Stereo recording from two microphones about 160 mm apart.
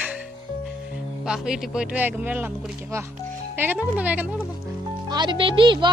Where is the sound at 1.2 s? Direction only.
5° right (ahead or behind).